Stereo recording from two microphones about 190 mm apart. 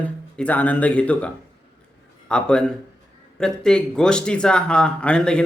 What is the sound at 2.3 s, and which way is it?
A man's voice, 5° left (ahead or behind).